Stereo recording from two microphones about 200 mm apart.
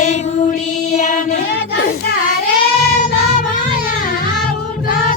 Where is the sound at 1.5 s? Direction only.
50° left (ahead or behind).